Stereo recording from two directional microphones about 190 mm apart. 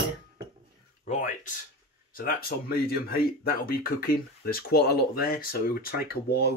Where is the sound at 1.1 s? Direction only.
40° left (ahead or behind).